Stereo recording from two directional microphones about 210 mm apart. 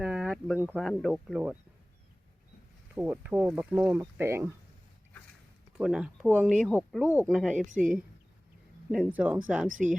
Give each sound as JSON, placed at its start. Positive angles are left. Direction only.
{"t": 0.0, "sound": "speech", "side_deg": -5}
{"t": 2.9, "sound": "speech", "side_deg": -5}
{"t": 5.7, "sound": "speech", "side_deg": 0}
{"t": 7.7, "sound": "speech", "side_deg": -40}
{"t": 8.9, "sound": "speech", "side_deg": -5}
{"t": 9.7, "sound": "speech", "side_deg": -35}